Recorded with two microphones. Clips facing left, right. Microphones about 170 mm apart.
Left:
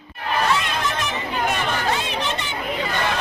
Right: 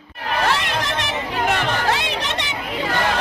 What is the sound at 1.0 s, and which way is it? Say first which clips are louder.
Chatter: right 1 dB; 80° right.